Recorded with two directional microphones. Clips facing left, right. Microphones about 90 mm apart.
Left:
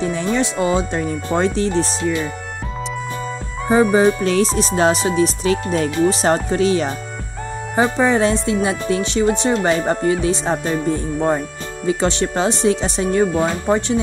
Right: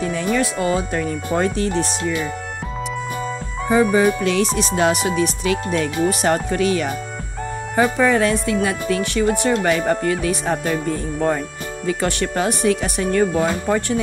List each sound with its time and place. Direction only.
0.0 s speech: 25° left (ahead or behind)
4.2 s speech: 35° left (ahead or behind)
11.1 s speech: 10° left (ahead or behind)
11.8 s speech: 25° left (ahead or behind)